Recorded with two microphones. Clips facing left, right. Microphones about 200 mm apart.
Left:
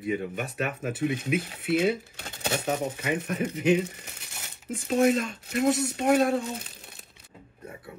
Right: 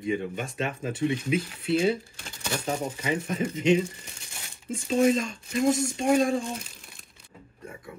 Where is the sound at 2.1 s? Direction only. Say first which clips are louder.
Left 4 dB; 60° left (ahead or behind).